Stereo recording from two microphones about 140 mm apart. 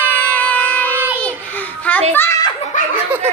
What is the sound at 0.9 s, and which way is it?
Child singing, 15° right (ahead or behind).